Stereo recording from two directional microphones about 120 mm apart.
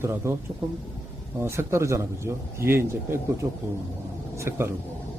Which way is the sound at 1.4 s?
20° right (ahead or behind).